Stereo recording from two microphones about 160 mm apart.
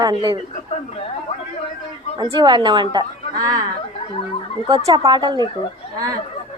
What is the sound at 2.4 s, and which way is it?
A woman's voice, 25° right (ahead or behind).